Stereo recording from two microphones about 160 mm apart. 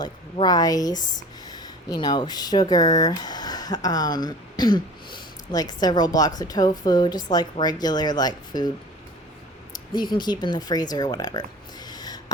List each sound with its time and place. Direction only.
0.0 s a woman's voice: 25° left (ahead or behind)
9.9 s a woman's voice: 25° left (ahead or behind)
11.9 s a sound: 25° left (ahead or behind)